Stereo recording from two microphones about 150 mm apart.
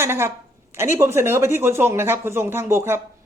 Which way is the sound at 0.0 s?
15° right (ahead or behind).